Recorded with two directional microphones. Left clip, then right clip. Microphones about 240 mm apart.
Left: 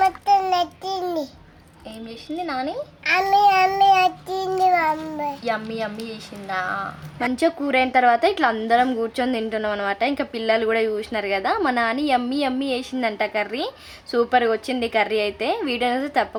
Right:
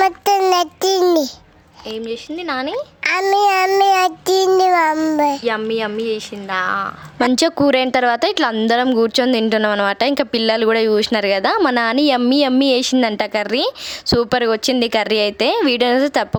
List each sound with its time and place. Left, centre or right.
0.0 s child singing: right
2.0 s child singing: right
3.0 s child singing: right